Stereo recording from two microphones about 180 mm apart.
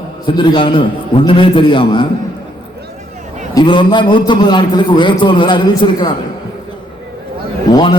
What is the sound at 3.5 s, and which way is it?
A man's voice, 25° left (ahead or behind).